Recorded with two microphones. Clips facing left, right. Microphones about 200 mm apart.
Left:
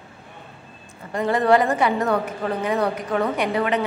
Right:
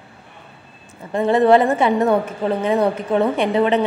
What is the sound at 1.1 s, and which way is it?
A woman's voice, 25° right (ahead or behind).